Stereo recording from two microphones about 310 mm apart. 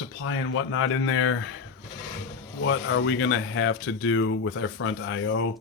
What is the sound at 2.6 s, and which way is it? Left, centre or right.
Speech, left.